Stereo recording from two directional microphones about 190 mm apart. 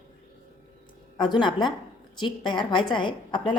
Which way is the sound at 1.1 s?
25° left (ahead or behind).